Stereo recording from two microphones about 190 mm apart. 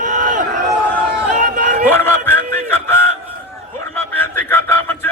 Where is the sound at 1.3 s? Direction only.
40° right (ahead or behind).